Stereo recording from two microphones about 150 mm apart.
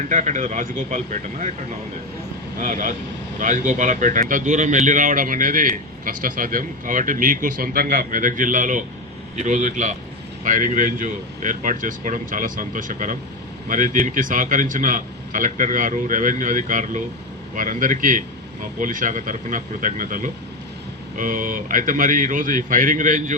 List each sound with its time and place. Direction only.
0.0 s speech: 55° right (ahead or behind)
2.6 s speech: 60° right (ahead or behind)